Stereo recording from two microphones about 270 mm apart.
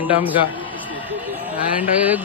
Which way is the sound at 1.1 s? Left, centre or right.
Centre.